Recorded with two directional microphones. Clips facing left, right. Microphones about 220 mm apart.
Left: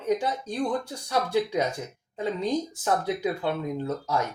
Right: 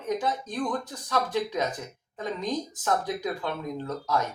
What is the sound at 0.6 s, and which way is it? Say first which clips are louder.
Speech: left 3 dB; 30° left (ahead or behind).